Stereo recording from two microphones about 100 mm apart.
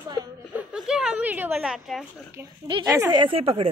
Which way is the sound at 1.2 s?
20° right (ahead or behind).